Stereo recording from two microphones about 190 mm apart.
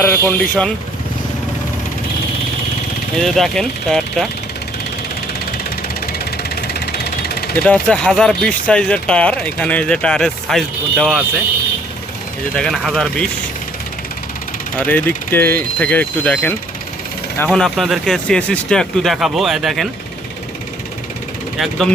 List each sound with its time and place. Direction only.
0.0 s speech: 10° left (ahead or behind)
3.2 s speech: centre (ahead or behind)
6.1 s vehicle: 55° left (ahead or behind)
7.5 s speech: 5° left (ahead or behind)
12.5 s speech: 5° left (ahead or behind)
14.8 s speech: 10° left (ahead or behind)
21.6 s speech: centre (ahead or behind)